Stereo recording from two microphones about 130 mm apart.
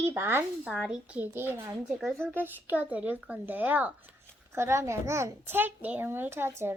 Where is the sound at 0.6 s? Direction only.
5° right (ahead or behind).